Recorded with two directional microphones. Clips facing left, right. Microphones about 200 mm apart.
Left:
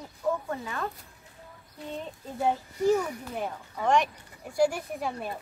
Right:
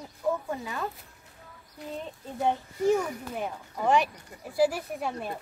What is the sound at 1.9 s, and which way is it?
Speech, centre (ahead or behind).